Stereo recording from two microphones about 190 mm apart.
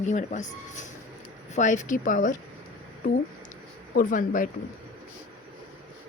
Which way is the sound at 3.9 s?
45° left (ahead or behind).